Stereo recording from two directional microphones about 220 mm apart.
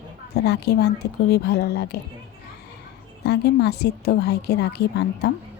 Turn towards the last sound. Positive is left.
turn(degrees=45)  # may be behind; listen again after turning